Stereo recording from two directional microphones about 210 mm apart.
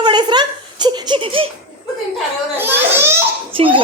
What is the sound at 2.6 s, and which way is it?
Speech, 10° right (ahead or behind).